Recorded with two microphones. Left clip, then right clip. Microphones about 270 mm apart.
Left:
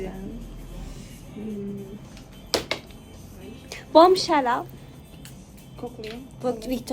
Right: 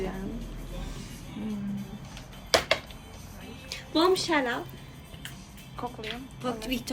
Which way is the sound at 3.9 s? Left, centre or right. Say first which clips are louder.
Left 9 dB; centre.